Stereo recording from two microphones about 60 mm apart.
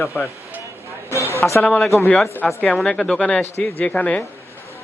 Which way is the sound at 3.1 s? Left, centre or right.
Left.